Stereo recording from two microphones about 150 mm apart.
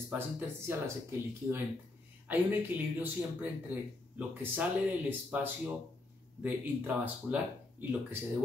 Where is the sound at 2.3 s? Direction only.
10° right (ahead or behind).